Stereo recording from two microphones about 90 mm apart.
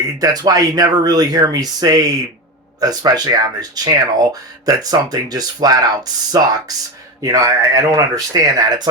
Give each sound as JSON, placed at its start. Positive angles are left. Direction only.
{"t": 0.2, "sound": "speech", "side_deg": -45}